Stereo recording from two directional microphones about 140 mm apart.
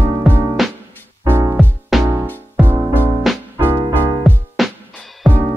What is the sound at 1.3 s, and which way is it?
Music, 15° right (ahead or behind).